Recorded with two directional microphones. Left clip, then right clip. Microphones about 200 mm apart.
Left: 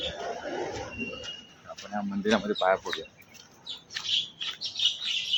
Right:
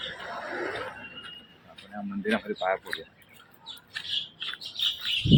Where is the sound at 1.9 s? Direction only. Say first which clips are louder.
Left 5 dB; 10° left (ahead or behind).